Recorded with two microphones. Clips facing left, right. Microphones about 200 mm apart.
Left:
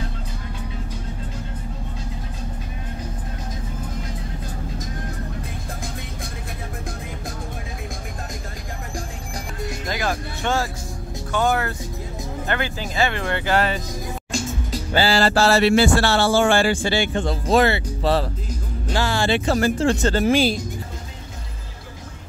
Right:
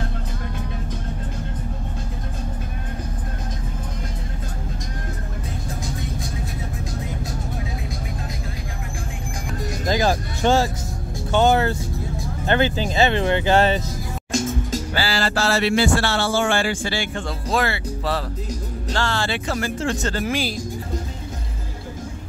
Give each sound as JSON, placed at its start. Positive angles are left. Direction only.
{"t": 9.8, "sound": "music", "side_deg": -30}
{"t": 12.4, "sound": "speech", "side_deg": -25}
{"t": 15.0, "sound": "speech", "side_deg": 25}
{"t": 18.9, "sound": "speech", "side_deg": 10}
{"t": 19.3, "sound": "speech", "side_deg": 30}